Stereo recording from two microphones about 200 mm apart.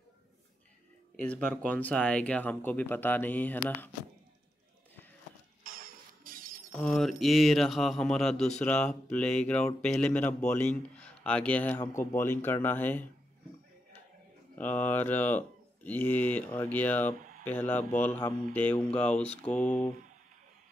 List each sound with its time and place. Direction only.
1.1 s speech: 10° left (ahead or behind)
5.6 s a sound: 45° right (ahead or behind)
6.8 s speech: centre (ahead or behind)
14.6 s speech: 10° left (ahead or behind)